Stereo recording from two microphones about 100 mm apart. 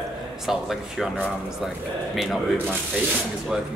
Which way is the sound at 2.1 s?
Centre (ahead or behind).